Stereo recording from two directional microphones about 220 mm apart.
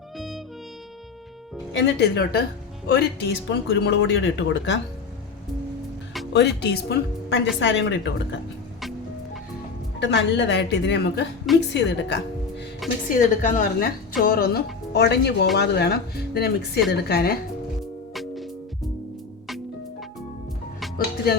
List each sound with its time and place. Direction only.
0.2 s music: centre (ahead or behind)
1.7 s a woman's voice: 50° left (ahead or behind)
6.3 s a woman's voice: 50° left (ahead or behind)
10.0 s a woman's voice: 55° left (ahead or behind)
13.1 s a woman's voice: 40° left (ahead or behind)
18.1 s music: centre (ahead or behind)